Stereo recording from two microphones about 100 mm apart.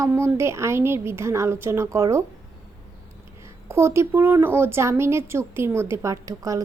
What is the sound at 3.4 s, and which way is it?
Speech, 25° right (ahead or behind).